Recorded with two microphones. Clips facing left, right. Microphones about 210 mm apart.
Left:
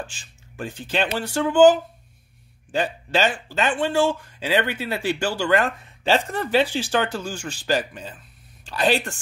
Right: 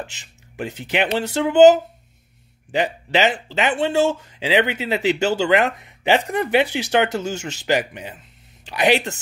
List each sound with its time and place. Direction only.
0.0 s speech: 20° right (ahead or behind)